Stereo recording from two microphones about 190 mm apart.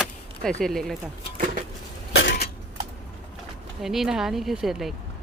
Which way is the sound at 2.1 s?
65° left (ahead or behind).